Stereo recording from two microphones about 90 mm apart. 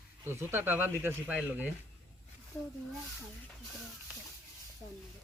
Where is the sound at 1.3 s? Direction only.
10° right (ahead or behind).